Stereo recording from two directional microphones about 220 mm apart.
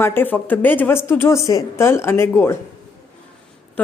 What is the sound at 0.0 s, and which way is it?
Speech, 10° left (ahead or behind).